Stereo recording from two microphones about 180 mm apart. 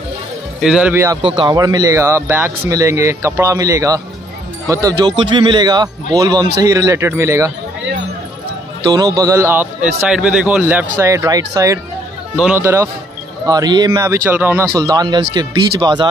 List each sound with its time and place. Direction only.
0.6 s a man's voice: 5° right (ahead or behind)
1.2 s a man's voice: 30° right (ahead or behind)
8.8 s a man's voice: 20° right (ahead or behind)